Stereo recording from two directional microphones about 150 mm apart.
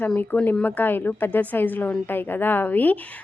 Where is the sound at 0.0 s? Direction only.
10° left (ahead or behind).